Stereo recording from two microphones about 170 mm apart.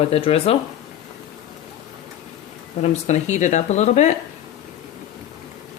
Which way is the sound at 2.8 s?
45° left (ahead or behind).